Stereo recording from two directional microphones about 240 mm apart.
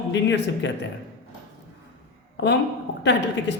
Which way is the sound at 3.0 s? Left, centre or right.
Left.